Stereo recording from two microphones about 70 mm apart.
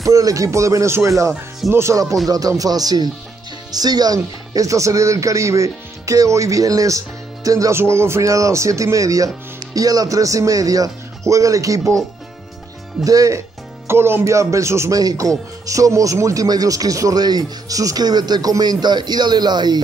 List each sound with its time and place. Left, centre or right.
0.0 s speech: right
2.2 s speech: right
7.7 s speech: right
13.0 s speech: right
13.8 s speech: right
15.0 s speech: right
16.4 s speech: right